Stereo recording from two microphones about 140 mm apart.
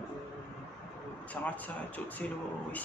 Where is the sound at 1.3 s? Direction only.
10° left (ahead or behind).